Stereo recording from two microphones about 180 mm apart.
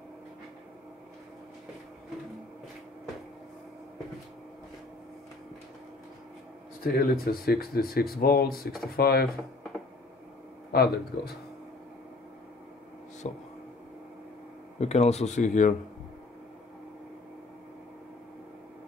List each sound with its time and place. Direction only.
6.8 s speech: 55° left (ahead or behind)
10.7 s speech: 60° left (ahead or behind)
13.2 s speech: 40° left (ahead or behind)
14.8 s speech: 35° left (ahead or behind)